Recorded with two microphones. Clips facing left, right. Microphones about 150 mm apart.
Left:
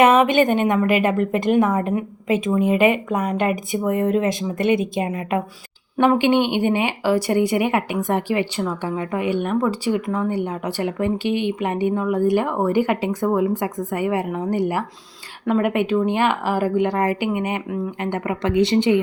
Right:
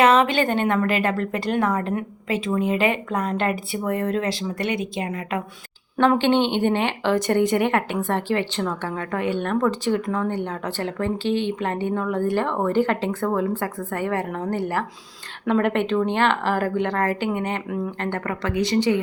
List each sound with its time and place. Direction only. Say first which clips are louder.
0.0 s a woman's voice: left 3 dB; 20° left (ahead or behind)
18.5 s a woman's voice: left 4 dB; 25° left (ahead or behind)